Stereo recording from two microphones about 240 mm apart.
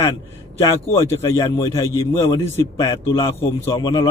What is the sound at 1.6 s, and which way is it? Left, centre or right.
A man's voice, centre.